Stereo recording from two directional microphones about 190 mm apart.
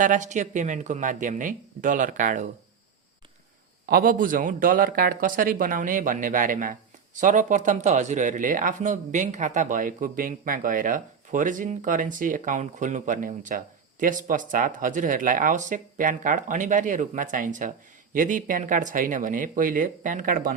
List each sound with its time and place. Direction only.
0.0 s speech: 40° right (ahead or behind)
3.8 s a man's voice: 50° right (ahead or behind)